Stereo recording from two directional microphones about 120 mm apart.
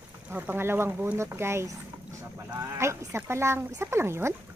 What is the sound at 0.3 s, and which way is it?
Speech, 15° right (ahead or behind).